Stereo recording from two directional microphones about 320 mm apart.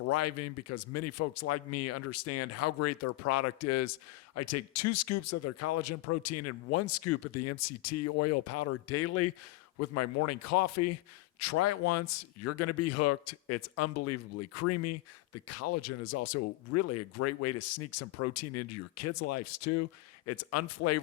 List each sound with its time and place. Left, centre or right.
0.1 s a man's voice: left